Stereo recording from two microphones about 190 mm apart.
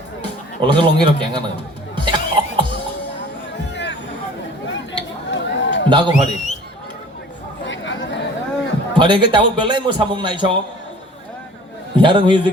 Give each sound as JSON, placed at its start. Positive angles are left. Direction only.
{"t": 0.6, "sound": "a man's voice", "side_deg": -25}
{"t": 2.0, "sound": "music", "side_deg": -25}
{"t": 4.7, "sound": "a sound", "side_deg": 75}
{"t": 5.9, "sound": "a man's voice", "side_deg": -25}
{"t": 6.1, "sound": "a man's voice", "side_deg": 35}
{"t": 7.6, "sound": "chatter", "side_deg": 75}
{"t": 9.0, "sound": "a man's voice", "side_deg": -25}
{"t": 11.9, "sound": "a man's voice", "side_deg": -25}